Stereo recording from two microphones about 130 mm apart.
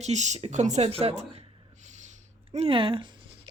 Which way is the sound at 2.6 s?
40° right (ahead or behind).